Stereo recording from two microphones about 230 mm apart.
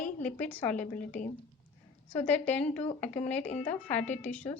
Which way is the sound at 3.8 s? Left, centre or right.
Centre.